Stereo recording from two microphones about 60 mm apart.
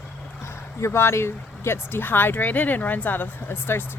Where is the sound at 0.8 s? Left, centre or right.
Left.